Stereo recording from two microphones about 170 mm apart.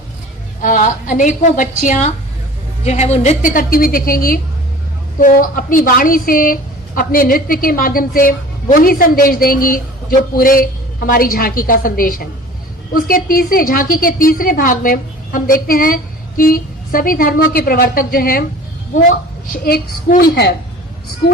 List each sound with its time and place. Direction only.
0.6 s a woman's voice: 50° left (ahead or behind); by 20.5 s 65° left (ahead or behind)